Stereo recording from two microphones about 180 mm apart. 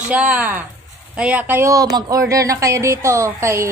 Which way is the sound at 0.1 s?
5° right (ahead or behind).